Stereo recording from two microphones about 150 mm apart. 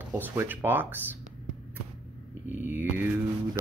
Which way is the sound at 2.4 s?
15° right (ahead or behind).